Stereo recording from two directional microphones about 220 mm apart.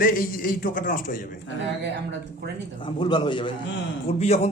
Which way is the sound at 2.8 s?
20° left (ahead or behind).